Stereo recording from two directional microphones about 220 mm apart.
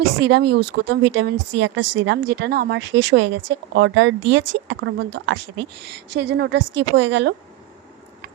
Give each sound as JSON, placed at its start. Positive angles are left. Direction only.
{"t": 0.3, "sound": "a woman's voice", "side_deg": -50}
{"t": 1.8, "sound": "a woman's voice", "side_deg": -90}
{"t": 2.0, "sound": "a woman's voice", "side_deg": -50}